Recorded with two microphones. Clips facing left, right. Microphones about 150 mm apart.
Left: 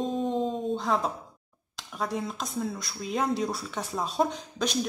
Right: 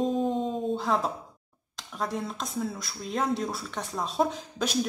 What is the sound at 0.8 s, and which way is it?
Speech, centre (ahead or behind).